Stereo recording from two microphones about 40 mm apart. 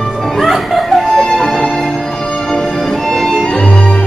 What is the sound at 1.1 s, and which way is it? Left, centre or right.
Music, centre.